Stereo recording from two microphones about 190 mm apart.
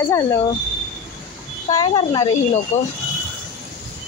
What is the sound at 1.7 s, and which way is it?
Speech, 25° left (ahead or behind).